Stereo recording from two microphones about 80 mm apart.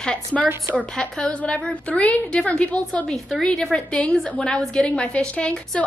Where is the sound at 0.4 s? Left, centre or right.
Right.